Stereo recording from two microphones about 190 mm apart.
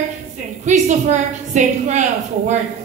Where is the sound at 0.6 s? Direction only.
40° right (ahead or behind).